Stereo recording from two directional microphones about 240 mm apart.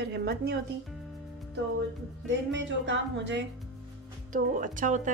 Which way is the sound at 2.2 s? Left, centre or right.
Right.